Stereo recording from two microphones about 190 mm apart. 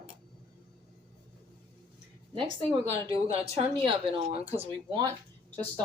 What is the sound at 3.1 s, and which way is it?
Speech, 30° right (ahead or behind).